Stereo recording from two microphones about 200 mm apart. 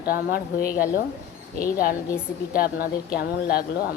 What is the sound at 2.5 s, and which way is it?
A woman's voice, 45° left (ahead or behind).